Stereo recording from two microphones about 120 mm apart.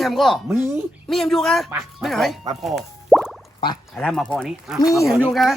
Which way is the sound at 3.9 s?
5° left (ahead or behind).